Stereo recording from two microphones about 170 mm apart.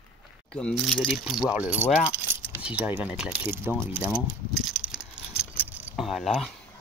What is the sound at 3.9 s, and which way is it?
Keys jangling, 10° right (ahead or behind).